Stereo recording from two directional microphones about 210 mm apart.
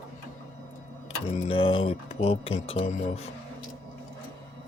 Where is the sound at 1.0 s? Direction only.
25° left (ahead or behind).